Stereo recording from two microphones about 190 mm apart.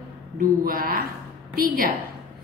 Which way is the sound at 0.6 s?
50° right (ahead or behind).